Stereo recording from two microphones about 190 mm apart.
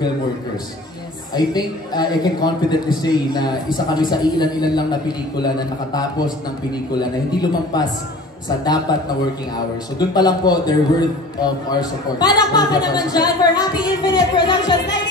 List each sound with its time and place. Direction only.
1.3 s a man's voice: 20° left (ahead or behind)